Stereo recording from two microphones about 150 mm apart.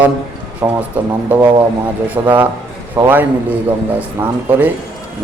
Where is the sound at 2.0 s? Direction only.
10° right (ahead or behind).